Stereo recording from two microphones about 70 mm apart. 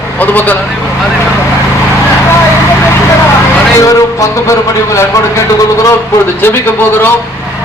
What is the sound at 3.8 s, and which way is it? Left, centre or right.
Speech, left.